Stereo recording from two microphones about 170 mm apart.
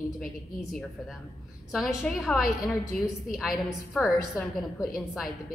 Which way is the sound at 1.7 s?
Centre (ahead or behind).